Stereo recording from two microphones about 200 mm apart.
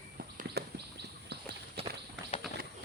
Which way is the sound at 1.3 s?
55° right (ahead or behind).